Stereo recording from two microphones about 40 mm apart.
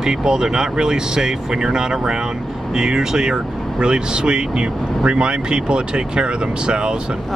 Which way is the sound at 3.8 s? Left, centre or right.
Right.